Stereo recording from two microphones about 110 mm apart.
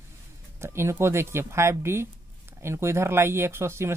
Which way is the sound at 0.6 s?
25° right (ahead or behind).